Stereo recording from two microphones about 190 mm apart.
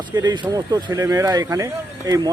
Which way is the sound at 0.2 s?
20° right (ahead or behind).